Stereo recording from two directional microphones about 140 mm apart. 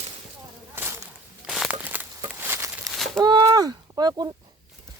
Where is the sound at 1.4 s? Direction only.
Centre (ahead or behind); by 2.9 s 20° right (ahead or behind).